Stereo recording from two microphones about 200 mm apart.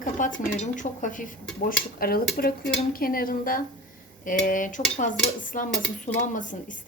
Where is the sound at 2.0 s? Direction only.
50° left (ahead or behind).